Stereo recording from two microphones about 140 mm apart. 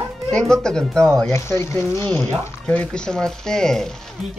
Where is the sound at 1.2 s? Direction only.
20° left (ahead or behind).